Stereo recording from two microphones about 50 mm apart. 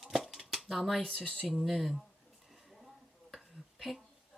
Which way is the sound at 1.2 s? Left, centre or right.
Left.